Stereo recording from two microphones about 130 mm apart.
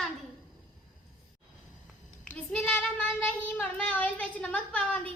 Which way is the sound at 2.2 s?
10° left (ahead or behind).